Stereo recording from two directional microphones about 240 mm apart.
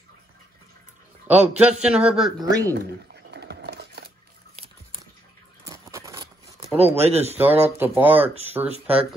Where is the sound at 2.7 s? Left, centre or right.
Right.